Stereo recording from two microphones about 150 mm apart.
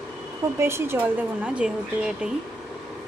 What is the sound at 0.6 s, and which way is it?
Speech, 15° right (ahead or behind).